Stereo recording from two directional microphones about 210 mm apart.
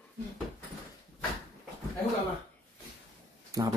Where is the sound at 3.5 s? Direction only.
15° right (ahead or behind).